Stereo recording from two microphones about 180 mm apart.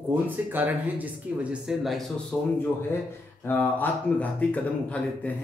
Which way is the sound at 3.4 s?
10° left (ahead or behind).